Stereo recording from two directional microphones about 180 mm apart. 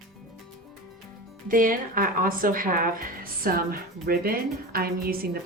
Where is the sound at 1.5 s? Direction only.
50° right (ahead or behind).